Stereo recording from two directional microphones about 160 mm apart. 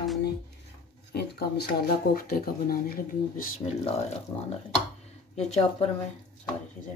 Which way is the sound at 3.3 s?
55° left (ahead or behind).